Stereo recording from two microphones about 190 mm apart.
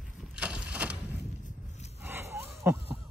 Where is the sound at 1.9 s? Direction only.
10° right (ahead or behind).